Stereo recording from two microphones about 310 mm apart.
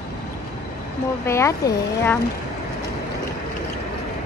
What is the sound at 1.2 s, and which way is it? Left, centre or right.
Speech, centre.